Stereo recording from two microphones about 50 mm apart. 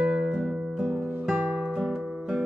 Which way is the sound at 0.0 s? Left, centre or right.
Centre.